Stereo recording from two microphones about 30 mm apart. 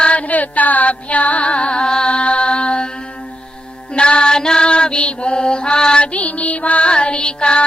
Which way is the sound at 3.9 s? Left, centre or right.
Left.